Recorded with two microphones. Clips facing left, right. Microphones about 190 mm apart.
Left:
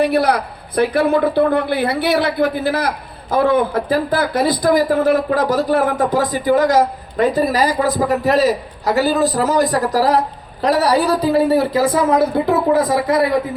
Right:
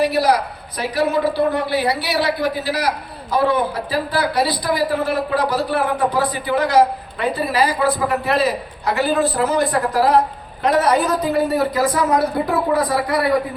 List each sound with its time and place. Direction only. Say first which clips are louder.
0.0 s a man's voice: left 1 dB; 55° left (ahead or behind); by 13.2 s 20° left (ahead or behind)